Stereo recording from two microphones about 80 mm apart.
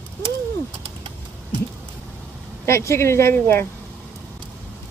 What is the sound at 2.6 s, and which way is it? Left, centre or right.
Speech, left.